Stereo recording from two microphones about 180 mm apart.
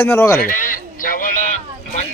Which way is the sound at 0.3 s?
50° left (ahead or behind).